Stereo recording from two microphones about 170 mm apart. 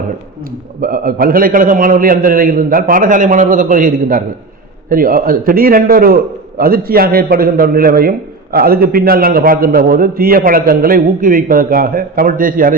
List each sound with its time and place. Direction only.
0.8 s a man's voice: 60° right (ahead or behind)